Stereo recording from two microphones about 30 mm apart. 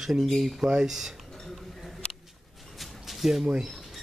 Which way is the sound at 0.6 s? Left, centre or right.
Centre.